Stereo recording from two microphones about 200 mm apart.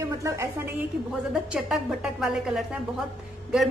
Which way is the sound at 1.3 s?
5° right (ahead or behind).